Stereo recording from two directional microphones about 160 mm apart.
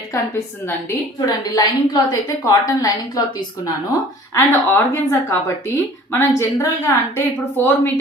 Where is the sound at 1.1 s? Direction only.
25° left (ahead or behind).